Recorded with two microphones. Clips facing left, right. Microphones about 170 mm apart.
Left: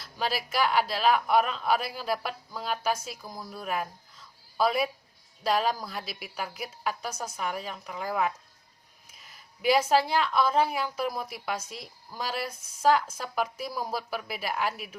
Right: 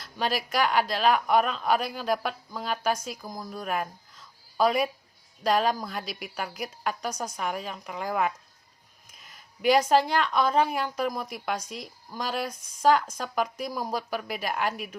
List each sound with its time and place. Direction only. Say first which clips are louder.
0.0 s speech: right 2 dB; 5° left (ahead or behind)
3.2 s speech: right 2 dB; 15° right (ahead or behind)
3.5 s a woman's voice: right 1 dB; 5° left (ahead or behind)